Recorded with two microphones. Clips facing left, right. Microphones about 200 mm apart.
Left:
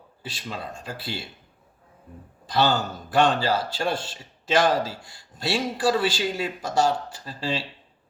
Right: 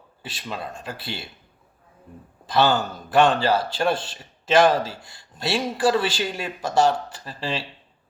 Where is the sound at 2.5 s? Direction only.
55° right (ahead or behind).